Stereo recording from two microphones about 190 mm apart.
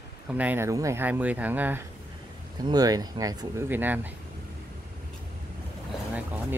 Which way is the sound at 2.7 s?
20° right (ahead or behind).